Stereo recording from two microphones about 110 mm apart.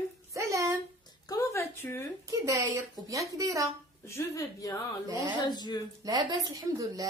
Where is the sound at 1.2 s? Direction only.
35° left (ahead or behind).